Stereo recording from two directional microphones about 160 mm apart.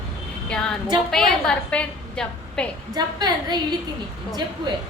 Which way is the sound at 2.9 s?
25° right (ahead or behind).